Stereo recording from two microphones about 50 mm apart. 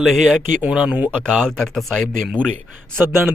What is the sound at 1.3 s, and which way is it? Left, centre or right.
Speech, centre.